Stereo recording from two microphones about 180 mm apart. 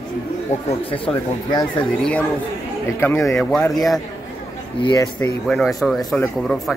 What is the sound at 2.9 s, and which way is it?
Speech, 15° left (ahead or behind).